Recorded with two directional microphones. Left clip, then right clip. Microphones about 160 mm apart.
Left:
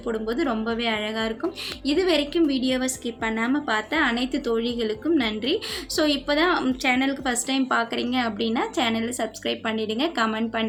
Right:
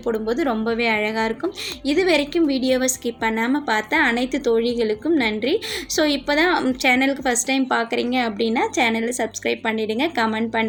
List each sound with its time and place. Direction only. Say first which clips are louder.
0.1 s a woman's voice: right 4 dB; 20° right (ahead or behind)